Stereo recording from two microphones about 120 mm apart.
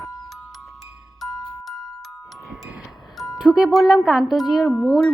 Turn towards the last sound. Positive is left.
turn(degrees=5)  # may be behind; listen again after turning